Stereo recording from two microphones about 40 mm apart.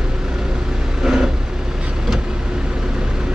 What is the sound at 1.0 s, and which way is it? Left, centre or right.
Vehicle, centre.